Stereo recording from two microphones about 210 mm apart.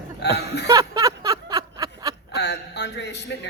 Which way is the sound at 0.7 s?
15° right (ahead or behind).